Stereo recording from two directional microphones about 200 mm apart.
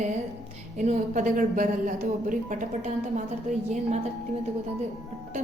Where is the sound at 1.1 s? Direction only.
40° right (ahead or behind).